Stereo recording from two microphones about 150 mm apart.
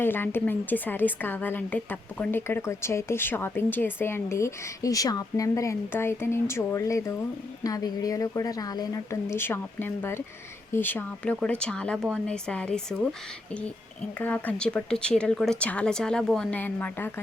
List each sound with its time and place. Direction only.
0.0 s a woman's voice: 15° left (ahead or behind)
14.2 s a woman's voice: 10° left (ahead or behind)